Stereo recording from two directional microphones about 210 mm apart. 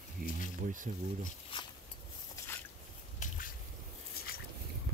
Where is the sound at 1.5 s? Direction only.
25° left (ahead or behind).